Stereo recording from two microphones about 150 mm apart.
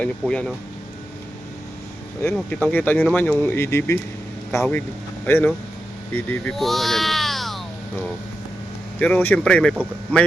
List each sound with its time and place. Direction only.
0.0 s speech: 5° left (ahead or behind)
2.2 s speech: 5° left (ahead or behind)
9.0 s speech: 10° left (ahead or behind)